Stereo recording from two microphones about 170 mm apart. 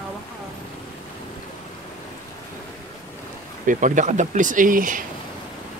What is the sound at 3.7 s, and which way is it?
Speech, 50° right (ahead or behind).